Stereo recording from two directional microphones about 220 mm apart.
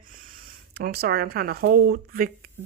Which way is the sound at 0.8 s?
45° right (ahead or behind).